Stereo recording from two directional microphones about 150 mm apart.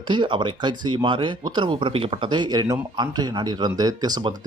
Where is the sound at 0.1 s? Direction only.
30° right (ahead or behind).